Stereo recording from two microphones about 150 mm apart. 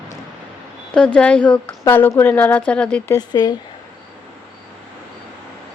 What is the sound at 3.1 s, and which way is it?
Speech, 25° left (ahead or behind).